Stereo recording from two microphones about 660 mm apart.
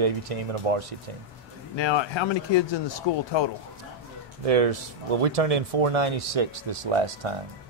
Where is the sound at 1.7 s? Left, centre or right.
Left.